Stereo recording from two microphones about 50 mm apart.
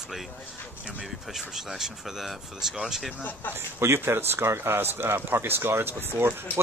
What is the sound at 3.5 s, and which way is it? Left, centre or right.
Speech, right.